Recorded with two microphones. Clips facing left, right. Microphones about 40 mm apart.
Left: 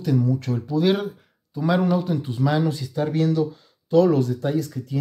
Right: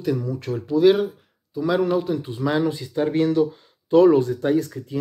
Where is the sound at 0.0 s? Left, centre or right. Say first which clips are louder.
Left 2 dB; centre.